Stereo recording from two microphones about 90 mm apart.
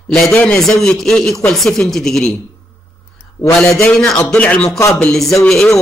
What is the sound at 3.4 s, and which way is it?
Speech, 15° left (ahead or behind).